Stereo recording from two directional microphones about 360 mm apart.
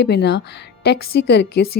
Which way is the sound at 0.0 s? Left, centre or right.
Left.